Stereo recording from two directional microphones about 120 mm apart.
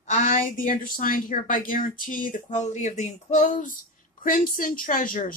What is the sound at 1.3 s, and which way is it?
Speech, 80° left.